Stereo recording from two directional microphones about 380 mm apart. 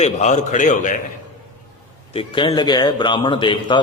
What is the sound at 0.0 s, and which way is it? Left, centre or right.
Speech, centre.